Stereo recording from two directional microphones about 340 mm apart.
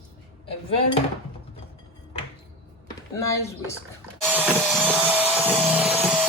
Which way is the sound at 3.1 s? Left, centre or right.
Centre.